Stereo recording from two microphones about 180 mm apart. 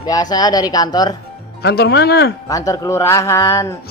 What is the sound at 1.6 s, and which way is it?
Speech, 65° left (ahead or behind).